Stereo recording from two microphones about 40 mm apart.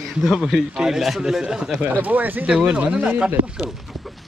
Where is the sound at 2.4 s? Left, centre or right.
Right.